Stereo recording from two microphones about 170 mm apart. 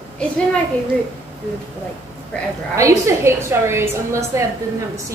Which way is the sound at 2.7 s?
15° right (ahead or behind).